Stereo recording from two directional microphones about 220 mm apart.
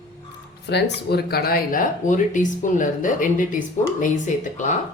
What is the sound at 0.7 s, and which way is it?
Speech, 50° left (ahead or behind).